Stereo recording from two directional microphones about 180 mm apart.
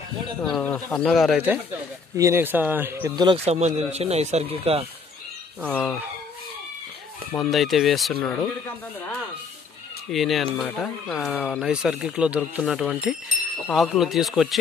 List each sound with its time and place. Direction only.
0.4 s speech: 5° left (ahead or behind); by 3.1 s 10° right (ahead or behind)
3.4 s speech: 35° right (ahead or behind)
5.7 s speech: 10° left (ahead or behind)
7.3 s speech: centre (ahead or behind)
10.1 s speech: centre (ahead or behind)